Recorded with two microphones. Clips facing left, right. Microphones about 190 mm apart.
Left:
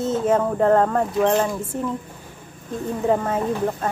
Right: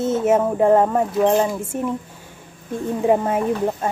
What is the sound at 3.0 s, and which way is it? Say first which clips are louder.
Speech: right 3 dB; 15° right (ahead or behind).